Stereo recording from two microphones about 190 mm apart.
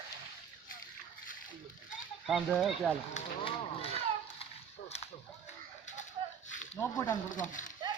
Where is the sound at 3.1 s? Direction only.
35° left (ahead or behind).